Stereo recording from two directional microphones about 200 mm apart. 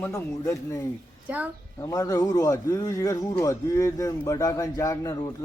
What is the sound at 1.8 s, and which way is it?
A man's voice, 15° left (ahead or behind).